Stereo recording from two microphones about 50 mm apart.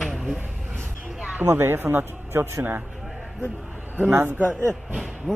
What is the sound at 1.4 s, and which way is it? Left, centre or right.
Speech, right.